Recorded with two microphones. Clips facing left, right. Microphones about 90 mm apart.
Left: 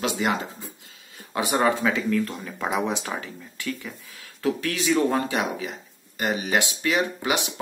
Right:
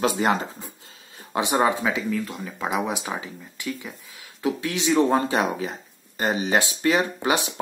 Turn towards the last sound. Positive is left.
turn(degrees=-35)  # may be behind; listen again after turning